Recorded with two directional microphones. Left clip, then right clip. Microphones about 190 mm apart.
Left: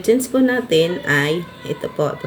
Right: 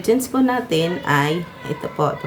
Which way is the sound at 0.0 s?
10° right (ahead or behind).